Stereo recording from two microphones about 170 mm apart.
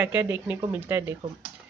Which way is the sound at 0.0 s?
10° right (ahead or behind).